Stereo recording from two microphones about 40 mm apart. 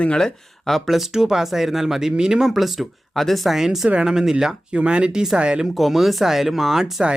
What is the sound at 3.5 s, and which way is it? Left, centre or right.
Speech, centre.